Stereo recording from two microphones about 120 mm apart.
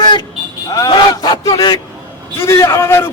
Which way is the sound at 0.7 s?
35° left (ahead or behind).